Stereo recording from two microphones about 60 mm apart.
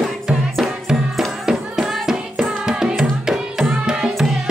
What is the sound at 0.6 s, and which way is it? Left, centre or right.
Music, centre.